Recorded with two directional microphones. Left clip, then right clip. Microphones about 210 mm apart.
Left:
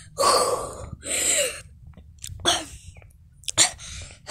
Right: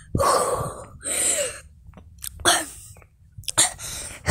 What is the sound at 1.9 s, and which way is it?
Chewing, 5° right (ahead or behind).